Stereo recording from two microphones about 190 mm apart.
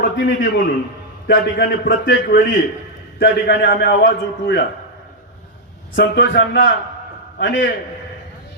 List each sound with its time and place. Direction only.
0.0 s a man's voice: 55° left (ahead or behind)
2.0 s a man's voice: 65° left (ahead or behind)
6.0 s a man's voice: 65° left (ahead or behind)